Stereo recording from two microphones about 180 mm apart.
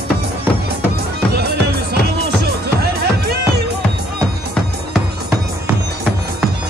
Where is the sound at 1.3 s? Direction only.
65° right (ahead or behind).